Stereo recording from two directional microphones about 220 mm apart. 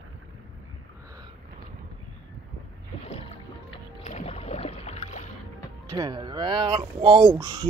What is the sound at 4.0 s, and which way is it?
Boat, 30° left (ahead or behind).